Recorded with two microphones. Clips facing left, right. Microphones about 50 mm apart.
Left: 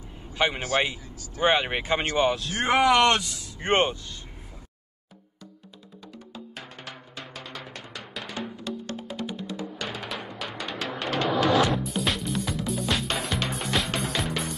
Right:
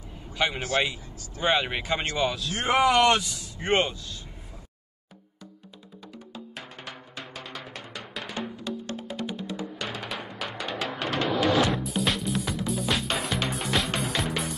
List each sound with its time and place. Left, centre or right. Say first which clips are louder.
0.3 s a man's voice: left 2 dB; centre
2.6 s speech: left 1 dB; centre
3.6 s speech: left 2 dB; left
6.3 s music: even; centre